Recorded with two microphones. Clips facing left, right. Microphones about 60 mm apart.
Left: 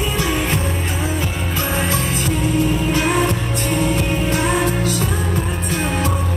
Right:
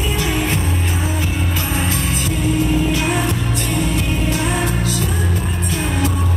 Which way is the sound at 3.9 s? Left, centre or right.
Left.